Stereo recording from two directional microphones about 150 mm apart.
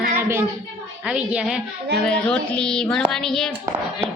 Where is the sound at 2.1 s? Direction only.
5° left (ahead or behind).